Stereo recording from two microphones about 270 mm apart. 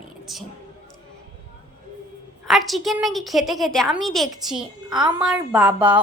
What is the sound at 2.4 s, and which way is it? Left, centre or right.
A woman's voice, centre.